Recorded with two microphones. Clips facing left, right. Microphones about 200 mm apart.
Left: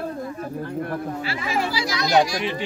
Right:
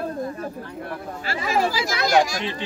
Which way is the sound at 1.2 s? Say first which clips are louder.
Right 8 dB; 45° right (ahead or behind).